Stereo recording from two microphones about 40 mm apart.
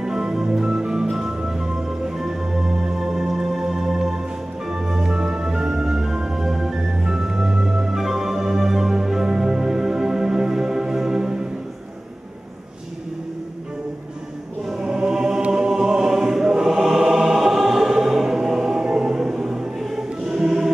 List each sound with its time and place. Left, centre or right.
0.0 s music: centre
3.0 s music: centre
14.7 s choir: centre